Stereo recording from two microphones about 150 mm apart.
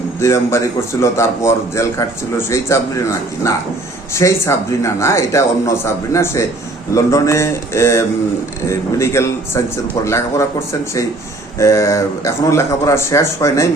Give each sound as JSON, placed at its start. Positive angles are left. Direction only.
{"t": 0.2, "sound": "a man's voice", "side_deg": 20}